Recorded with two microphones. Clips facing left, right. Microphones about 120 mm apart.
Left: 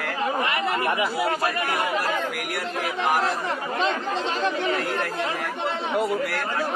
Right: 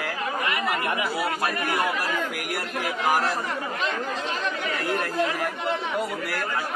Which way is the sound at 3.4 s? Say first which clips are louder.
Left 3 dB; 30° left (ahead or behind).